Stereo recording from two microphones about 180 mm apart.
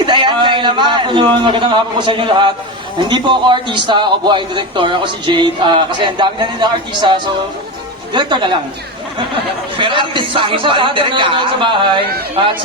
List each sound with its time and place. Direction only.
0.0 s a man's voice: 25° right (ahead or behind)
9.7 s a man's voice: 25° right (ahead or behind)